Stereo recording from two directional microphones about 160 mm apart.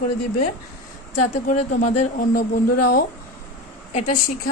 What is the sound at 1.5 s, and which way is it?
Speech, 50° left (ahead or behind).